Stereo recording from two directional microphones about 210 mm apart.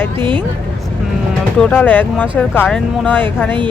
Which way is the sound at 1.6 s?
10° left (ahead or behind).